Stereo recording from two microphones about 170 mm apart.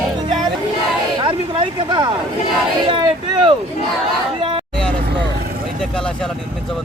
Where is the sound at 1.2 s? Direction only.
30° right (ahead or behind).